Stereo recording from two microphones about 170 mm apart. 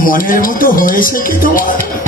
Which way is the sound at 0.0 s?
55° left (ahead or behind).